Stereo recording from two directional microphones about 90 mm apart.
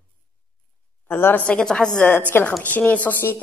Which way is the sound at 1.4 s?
10° left (ahead or behind).